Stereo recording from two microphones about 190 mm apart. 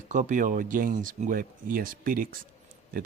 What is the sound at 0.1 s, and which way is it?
Speech, 40° right (ahead or behind).